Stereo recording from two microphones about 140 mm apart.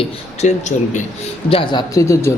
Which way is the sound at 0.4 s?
60° left (ahead or behind).